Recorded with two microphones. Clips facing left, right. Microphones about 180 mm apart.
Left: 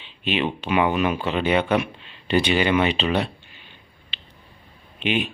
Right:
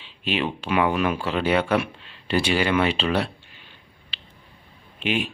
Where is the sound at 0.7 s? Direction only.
Centre (ahead or behind).